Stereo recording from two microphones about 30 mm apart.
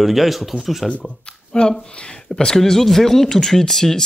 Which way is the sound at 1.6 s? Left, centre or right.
Left.